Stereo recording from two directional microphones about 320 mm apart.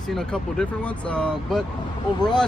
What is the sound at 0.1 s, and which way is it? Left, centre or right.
Speech, centre.